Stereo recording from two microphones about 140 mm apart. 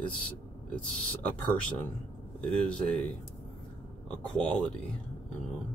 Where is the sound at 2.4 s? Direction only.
5° left (ahead or behind).